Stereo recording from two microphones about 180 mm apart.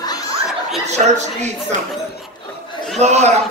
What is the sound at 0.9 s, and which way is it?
Speech, 40° right (ahead or behind).